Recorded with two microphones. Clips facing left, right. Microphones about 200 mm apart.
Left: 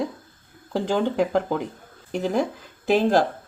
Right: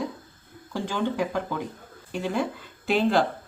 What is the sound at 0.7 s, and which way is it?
Speech, 35° left (ahead or behind).